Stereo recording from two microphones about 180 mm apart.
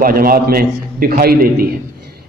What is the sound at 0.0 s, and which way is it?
A man's voice, 55° right (ahead or behind).